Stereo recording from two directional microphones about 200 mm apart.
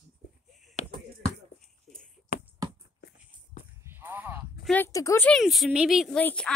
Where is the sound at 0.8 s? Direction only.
35° left (ahead or behind).